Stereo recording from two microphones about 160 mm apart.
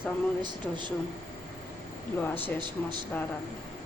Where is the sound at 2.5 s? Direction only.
30° right (ahead or behind).